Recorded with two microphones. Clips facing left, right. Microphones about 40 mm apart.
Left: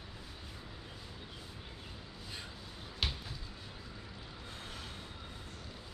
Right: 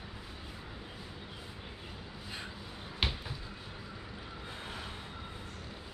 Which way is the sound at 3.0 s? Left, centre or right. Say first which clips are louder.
Right 3 dB; right.